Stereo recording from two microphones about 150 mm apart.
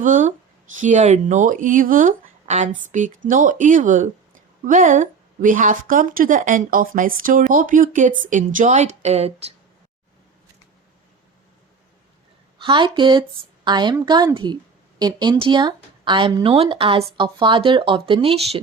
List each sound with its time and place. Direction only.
0.0 s a woman's voice: 60° right (ahead or behind)
12.5 s a woman's voice: 35° right (ahead or behind)